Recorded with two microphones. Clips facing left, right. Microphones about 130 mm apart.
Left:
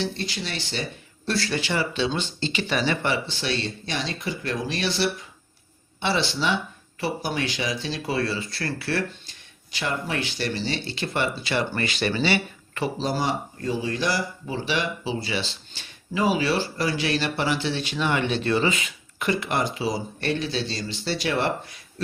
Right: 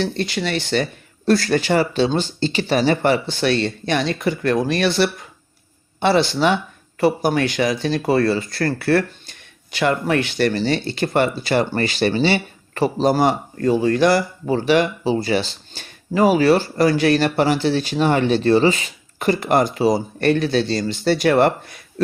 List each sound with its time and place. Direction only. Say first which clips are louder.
0.0 s speech: right 7 dB; 65° right (ahead or behind)
9.7 s speech: right 9 dB; 65° right (ahead or behind); by 13.1 s 40° right (ahead or behind)
13.1 s speech: right 11 dB; 55° right (ahead or behind)